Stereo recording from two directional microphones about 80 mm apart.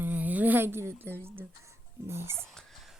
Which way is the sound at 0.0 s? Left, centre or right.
Right.